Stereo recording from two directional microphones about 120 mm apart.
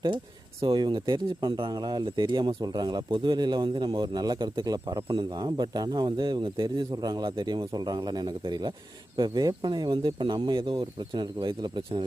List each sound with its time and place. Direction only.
0.6 s speech: 40° right (ahead or behind)